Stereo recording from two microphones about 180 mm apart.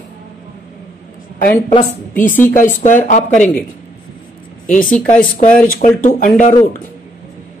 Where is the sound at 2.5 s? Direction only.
45° left (ahead or behind).